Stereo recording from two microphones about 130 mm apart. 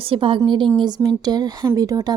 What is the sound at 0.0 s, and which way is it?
Speech, 45° right (ahead or behind).